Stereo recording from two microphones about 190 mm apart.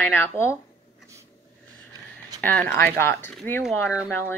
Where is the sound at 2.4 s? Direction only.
10° left (ahead or behind).